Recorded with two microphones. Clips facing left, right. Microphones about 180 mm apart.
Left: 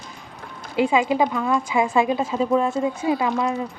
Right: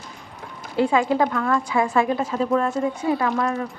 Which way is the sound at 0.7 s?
15° left (ahead or behind).